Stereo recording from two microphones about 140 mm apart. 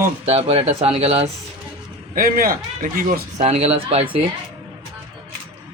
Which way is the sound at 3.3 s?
50° right (ahead or behind).